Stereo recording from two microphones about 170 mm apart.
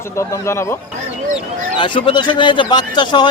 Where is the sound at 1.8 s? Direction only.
30° left (ahead or behind).